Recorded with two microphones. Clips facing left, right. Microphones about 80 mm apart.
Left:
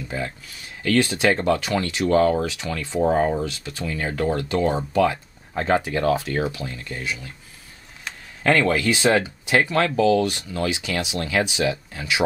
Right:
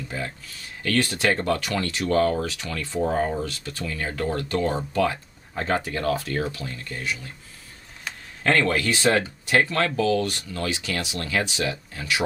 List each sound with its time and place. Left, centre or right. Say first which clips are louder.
0.8 s speech: left 3 dB; centre
8.5 s speech: left 3 dB; centre